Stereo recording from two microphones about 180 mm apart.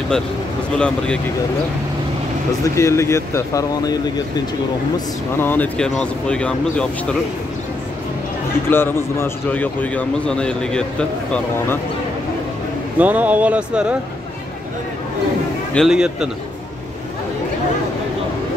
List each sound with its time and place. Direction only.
0.7 s speech: 5° left (ahead or behind)
2.6 s a man's voice: 15° left (ahead or behind)
4.9 s speech: 10° left (ahead or behind)
8.6 s a man's voice: 10° left (ahead or behind)
13.0 s speech: 10° right (ahead or behind)
15.7 s speech: centre (ahead or behind)